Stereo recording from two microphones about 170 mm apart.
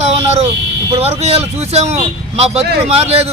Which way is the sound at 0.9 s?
40° right (ahead or behind).